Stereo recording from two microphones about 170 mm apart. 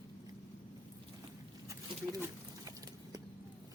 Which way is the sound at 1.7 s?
20° right (ahead or behind).